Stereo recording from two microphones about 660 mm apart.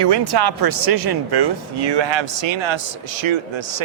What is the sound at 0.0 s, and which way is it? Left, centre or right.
Speech, right.